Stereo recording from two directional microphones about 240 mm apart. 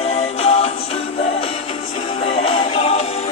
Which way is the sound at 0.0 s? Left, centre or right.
Left.